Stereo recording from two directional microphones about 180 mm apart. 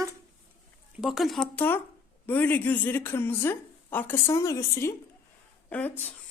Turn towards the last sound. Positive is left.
turn(degrees=10)  # may be behind; listen again after turning